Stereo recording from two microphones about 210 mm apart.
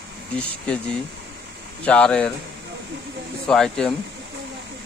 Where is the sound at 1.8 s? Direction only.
5° left (ahead or behind).